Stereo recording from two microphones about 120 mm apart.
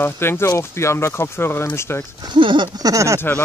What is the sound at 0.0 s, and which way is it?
Speech, 20° left (ahead or behind).